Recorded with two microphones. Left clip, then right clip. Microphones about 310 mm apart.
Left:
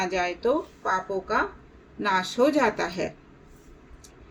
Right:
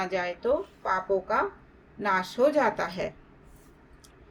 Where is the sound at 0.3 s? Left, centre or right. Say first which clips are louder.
Left 2 dB; right.